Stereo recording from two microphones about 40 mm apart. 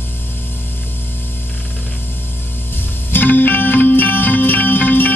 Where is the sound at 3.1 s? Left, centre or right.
Left.